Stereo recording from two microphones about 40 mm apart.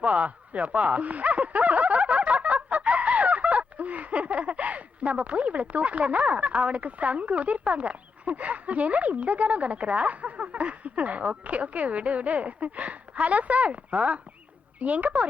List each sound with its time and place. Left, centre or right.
0.0 s a woman's voice: right